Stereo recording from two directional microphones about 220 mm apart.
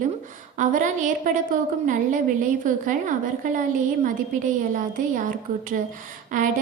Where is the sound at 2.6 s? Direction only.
35° right (ahead or behind).